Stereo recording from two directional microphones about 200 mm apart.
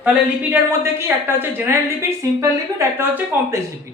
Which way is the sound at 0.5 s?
10° right (ahead or behind).